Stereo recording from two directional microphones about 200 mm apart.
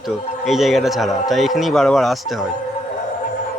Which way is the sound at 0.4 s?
Centre (ahead or behind).